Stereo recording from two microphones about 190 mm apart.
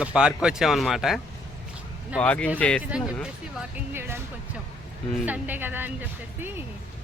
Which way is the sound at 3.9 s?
10° right (ahead or behind).